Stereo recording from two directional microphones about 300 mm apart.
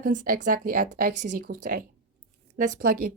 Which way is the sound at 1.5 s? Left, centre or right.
Right.